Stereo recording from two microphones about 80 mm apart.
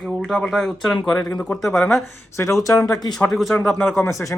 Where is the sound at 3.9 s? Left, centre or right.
Left.